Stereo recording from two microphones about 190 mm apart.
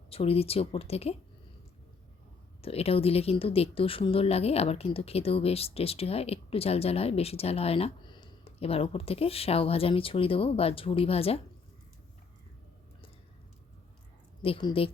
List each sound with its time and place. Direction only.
0.1 s speech: 30° left (ahead or behind)
2.6 s speech: 30° left (ahead or behind)
14.4 s a woman's voice: 30° left (ahead or behind)